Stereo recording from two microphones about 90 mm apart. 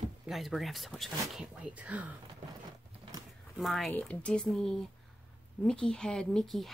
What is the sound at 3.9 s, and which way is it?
Speech, 15° left (ahead or behind).